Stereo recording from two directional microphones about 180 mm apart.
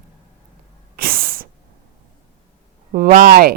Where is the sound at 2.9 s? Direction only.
50° right (ahead or behind).